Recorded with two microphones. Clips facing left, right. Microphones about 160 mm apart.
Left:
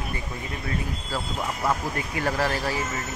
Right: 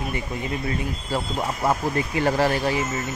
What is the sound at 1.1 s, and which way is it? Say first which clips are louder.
Speech: right 4 dB; 30° right (ahead or behind).